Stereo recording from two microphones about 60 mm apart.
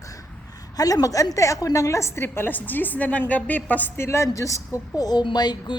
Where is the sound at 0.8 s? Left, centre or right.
Left.